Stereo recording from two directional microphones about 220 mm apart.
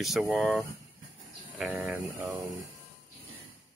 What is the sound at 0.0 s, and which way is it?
Speech, centre (ahead or behind).